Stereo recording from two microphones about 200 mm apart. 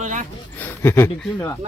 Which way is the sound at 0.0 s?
40° right (ahead or behind).